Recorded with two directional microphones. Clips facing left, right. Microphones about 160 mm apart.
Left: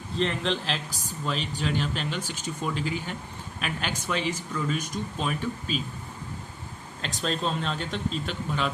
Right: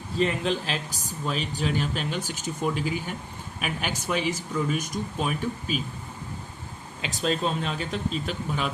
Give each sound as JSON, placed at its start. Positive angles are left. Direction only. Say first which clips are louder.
{"t": 0.2, "sound": "speech", "louder": "right 2 dB", "side_deg": -5}
{"t": 7.0, "sound": "speech", "louder": "right 3 dB", "side_deg": -5}